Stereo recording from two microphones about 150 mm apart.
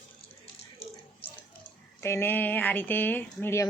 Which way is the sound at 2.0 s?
15° left (ahead or behind).